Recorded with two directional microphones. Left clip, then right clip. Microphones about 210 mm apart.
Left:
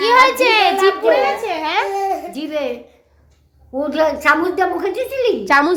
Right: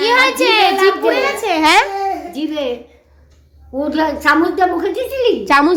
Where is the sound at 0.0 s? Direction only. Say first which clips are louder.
Left 1 dB; 10° left (ahead or behind).